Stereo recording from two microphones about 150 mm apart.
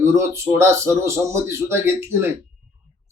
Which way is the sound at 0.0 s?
15° right (ahead or behind).